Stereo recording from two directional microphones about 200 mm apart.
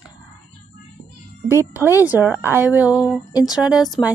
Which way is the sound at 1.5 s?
10° right (ahead or behind).